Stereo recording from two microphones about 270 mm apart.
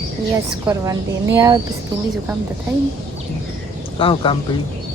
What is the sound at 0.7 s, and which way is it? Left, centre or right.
Speech, centre.